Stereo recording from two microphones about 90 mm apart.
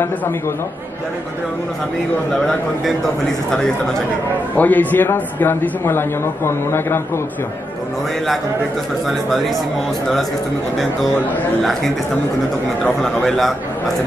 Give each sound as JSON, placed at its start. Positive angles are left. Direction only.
{"t": 2.4, "sound": "a man's voice", "side_deg": 5}
{"t": 4.6, "sound": "a man's voice", "side_deg": 20}
{"t": 13.0, "sound": "a man's voice", "side_deg": 5}